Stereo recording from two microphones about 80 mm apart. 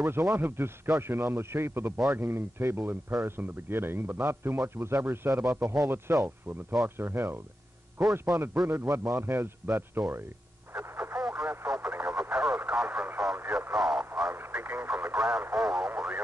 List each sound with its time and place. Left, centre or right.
0.0 s a man's voice: right
10.7 s radio: right
13.7 s radio: centre
14.3 s radio: right
15.1 s radio: centre